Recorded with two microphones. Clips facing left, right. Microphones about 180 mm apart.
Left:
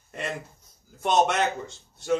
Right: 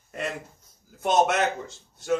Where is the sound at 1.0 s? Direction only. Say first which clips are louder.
Right 1 dB; 5° right (ahead or behind).